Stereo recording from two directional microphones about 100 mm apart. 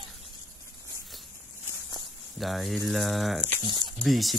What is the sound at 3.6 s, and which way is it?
Speech, 45° right (ahead or behind).